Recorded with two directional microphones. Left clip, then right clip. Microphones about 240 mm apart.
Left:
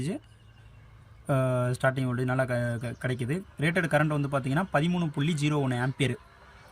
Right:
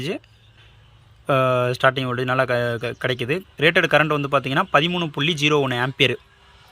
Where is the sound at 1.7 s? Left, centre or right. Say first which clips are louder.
Right 9 dB; centre.